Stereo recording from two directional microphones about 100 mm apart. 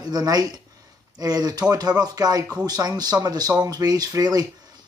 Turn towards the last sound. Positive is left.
turn(degrees=-40)  # may be behind; listen again after turning